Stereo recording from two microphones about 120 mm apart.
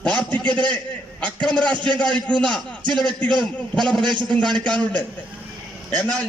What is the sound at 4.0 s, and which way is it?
Speech, 40° right (ahead or behind).